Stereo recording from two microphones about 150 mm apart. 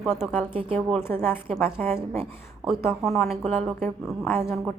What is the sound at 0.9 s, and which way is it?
A woman's voice, 15° left (ahead or behind).